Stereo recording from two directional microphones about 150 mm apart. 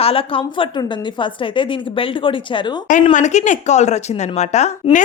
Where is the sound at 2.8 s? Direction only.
60° left (ahead or behind).